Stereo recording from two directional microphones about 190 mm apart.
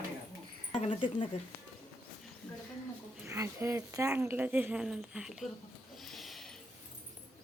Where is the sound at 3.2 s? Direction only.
15° right (ahead or behind).